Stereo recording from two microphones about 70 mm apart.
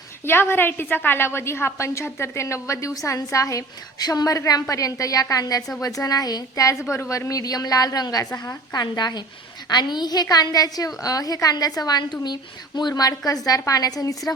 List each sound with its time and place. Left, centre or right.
0.3 s a woman's voice: left
6.9 s a woman's voice: left
8.7 s a woman's voice: left
12.2 s speech: left
12.9 s a woman's voice: left